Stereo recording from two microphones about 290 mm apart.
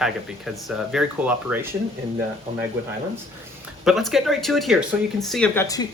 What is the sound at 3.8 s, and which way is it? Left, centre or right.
Speech, centre.